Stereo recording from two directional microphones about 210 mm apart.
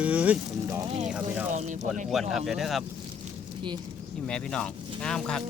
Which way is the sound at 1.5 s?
35° right (ahead or behind).